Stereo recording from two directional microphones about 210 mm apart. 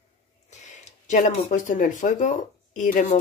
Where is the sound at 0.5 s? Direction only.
35° left (ahead or behind).